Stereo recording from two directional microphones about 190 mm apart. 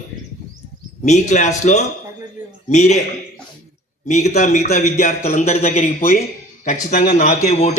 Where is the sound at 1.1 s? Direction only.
40° left (ahead or behind).